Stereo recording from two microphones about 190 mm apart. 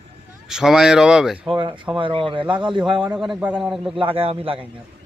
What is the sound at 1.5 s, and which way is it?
A man's voice, 25° right (ahead or behind).